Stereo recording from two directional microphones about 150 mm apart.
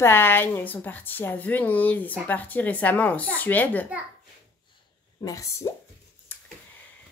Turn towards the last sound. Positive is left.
turn(degrees=20)  # may be behind; listen again after turning